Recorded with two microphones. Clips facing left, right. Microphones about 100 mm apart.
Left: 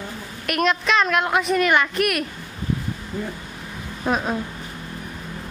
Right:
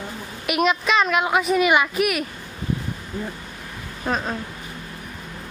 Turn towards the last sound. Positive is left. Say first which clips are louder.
# left 2 dB
turn(degrees=5)  # may be behind; listen again after turning